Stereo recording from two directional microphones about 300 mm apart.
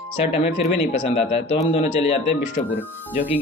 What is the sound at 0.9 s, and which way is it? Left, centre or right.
Speech, centre.